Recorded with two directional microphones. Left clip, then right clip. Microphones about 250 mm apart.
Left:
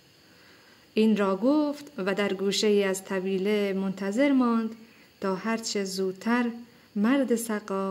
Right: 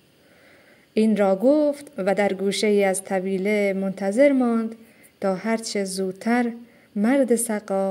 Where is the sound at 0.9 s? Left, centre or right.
Centre.